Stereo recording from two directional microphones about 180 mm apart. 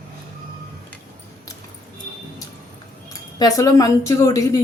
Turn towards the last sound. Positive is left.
turn(degrees=20)  # may be behind; listen again after turning